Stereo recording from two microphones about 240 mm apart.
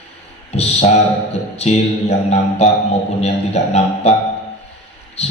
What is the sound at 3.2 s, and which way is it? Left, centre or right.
Speech, left.